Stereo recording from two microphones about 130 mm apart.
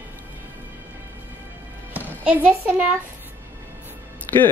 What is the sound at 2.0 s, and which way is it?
Music, 15° right (ahead or behind).